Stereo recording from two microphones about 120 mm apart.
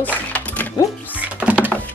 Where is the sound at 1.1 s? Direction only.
10° right (ahead or behind).